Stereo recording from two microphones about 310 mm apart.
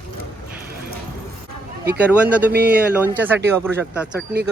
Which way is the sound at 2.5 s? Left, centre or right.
Right.